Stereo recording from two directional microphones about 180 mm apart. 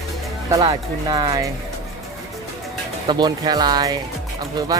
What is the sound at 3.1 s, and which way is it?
Speech, 20° right (ahead or behind).